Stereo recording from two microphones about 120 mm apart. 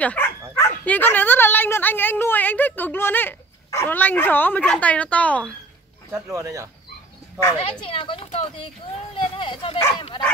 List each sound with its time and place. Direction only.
0.0 s speech: 10° left (ahead or behind)
6.1 s speech: 25° right (ahead or behind)
7.5 s speech: 50° left (ahead or behind)